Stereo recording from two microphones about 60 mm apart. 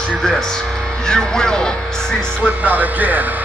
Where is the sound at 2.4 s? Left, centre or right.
Right.